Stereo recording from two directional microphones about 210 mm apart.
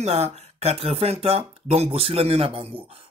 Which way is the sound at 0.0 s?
30° right (ahead or behind).